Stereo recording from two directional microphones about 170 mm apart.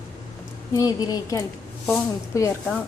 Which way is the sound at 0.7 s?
20° left (ahead or behind).